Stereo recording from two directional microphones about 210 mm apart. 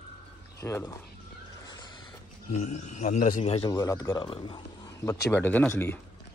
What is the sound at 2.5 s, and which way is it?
A man's voice, 35° left (ahead or behind).